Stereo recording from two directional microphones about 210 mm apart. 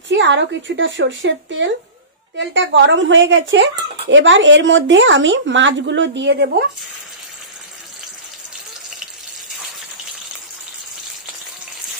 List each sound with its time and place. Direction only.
0.1 s speech: 60° right (ahead or behind)